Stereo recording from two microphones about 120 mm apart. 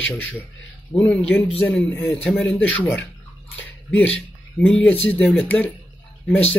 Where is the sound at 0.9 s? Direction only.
10° left (ahead or behind).